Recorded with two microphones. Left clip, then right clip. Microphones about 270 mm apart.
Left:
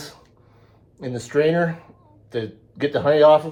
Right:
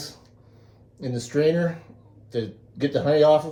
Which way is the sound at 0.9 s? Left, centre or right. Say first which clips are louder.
Left 4 dB; centre.